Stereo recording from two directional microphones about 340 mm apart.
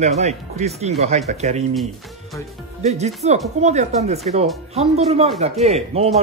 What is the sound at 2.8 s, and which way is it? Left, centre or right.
Speech, centre.